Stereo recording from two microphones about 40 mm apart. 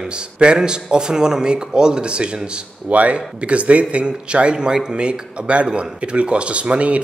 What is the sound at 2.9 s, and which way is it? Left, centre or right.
Speech, right.